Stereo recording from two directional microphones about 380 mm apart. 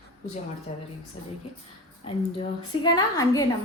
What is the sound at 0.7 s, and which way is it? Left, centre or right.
Speech, centre.